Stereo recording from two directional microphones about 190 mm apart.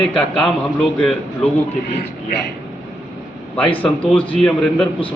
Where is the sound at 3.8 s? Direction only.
5° left (ahead or behind).